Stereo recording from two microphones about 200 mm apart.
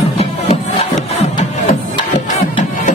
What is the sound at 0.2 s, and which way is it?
Music, 35° left (ahead or behind).